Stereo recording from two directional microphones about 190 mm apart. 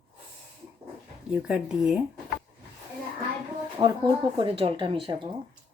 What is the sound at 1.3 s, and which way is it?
Speech, 5° right (ahead or behind).